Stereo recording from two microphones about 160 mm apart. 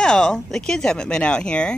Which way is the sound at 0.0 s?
5° left (ahead or behind).